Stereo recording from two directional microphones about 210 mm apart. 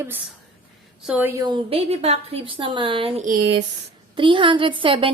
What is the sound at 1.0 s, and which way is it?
Speech, 5° right (ahead or behind).